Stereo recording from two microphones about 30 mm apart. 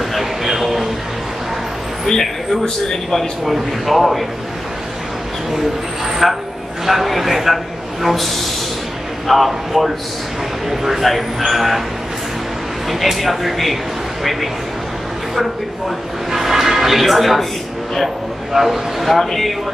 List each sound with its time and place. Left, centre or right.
0.2 s a sound: centre
2.9 s speech: centre
3.4 s a man's voice: centre
6.2 s a man's voice: centre
13.0 s a man's voice: centre
16.3 s a sound: centre
18.5 s speech: centre
19.1 s speech: centre